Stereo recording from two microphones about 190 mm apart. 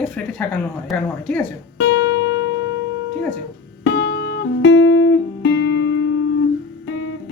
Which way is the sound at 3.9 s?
65° left (ahead or behind).